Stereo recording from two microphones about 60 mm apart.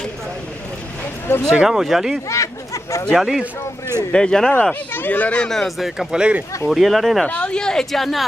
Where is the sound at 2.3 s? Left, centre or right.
Left.